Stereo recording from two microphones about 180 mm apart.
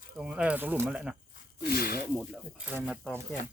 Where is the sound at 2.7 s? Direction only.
5° left (ahead or behind).